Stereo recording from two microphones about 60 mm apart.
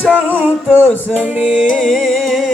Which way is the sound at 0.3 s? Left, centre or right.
Right.